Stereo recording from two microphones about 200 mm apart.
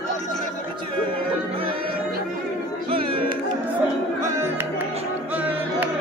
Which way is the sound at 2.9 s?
25° right (ahead or behind).